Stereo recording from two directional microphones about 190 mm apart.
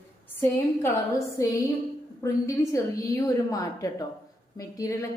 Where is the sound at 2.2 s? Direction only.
15° left (ahead or behind).